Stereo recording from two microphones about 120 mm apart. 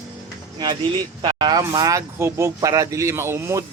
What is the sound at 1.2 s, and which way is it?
Speech, 40° right (ahead or behind).